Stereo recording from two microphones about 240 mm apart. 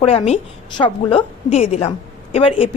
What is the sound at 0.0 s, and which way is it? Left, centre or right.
Speech, left.